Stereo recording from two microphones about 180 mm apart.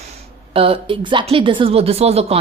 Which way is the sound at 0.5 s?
30° right (ahead or behind).